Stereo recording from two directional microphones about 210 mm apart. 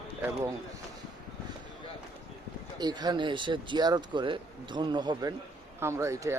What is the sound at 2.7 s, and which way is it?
Speech, 20° right (ahead or behind).